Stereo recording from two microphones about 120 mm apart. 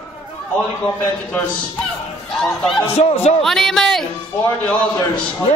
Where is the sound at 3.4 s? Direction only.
5° left (ahead or behind).